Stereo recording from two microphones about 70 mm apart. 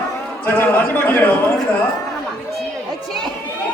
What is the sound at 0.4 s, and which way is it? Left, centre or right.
A man's voice, left.